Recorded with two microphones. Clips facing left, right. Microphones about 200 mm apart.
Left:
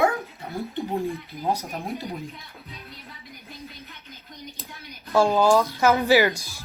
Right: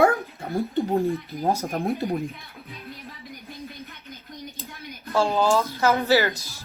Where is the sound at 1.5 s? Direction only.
50° right (ahead or behind).